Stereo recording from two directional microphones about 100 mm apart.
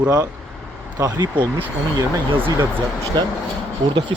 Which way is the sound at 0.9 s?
35° right (ahead or behind).